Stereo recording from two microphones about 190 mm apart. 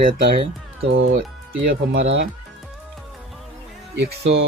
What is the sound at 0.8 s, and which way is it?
Speech, 90° right.